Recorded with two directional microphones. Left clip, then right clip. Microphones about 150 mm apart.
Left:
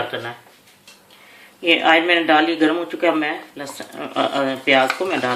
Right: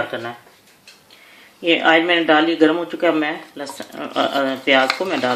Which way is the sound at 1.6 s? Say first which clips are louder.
Even; 55° right (ahead or behind).